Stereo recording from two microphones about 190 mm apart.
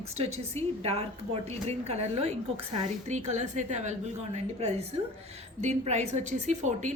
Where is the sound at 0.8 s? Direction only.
35° right (ahead or behind).